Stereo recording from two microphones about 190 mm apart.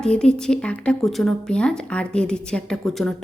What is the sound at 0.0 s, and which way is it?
A woman's voice, 5° left (ahead or behind).